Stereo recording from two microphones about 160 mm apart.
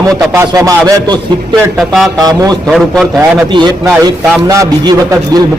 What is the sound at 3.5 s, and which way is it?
A man's voice, 25° right (ahead or behind).